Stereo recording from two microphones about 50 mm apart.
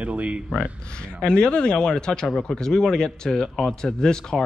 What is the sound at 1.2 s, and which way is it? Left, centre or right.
Speech, centre.